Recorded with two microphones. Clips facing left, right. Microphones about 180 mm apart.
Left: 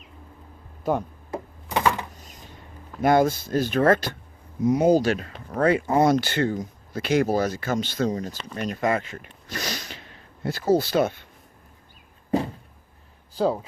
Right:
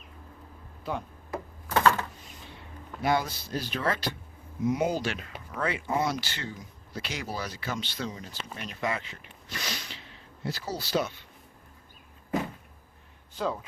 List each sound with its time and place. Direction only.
0.9 s speech: 45° left (ahead or behind)
1.3 s a sound: 15° left (ahead or behind)
2.1 s a sound: 40° left (ahead or behind)
3.0 s speech: 50° left (ahead or behind)
4.6 s speech: 40° left (ahead or behind)
13.3 s speech: 35° left (ahead or behind)